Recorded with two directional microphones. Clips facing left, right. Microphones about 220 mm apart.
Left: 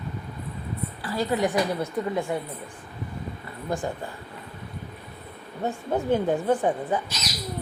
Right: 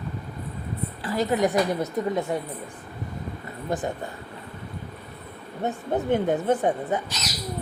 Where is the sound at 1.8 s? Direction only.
20° right (ahead or behind).